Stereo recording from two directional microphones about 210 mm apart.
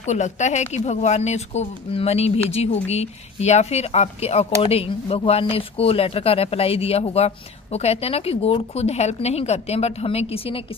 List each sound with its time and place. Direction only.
0.0 s speech: 35° left (ahead or behind)